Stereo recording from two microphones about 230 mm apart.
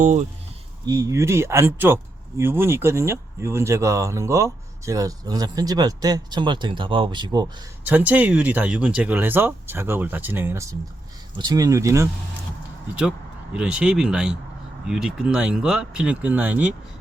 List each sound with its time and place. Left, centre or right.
0.0 s speech: right
0.9 s speech: centre
7.9 s speech: centre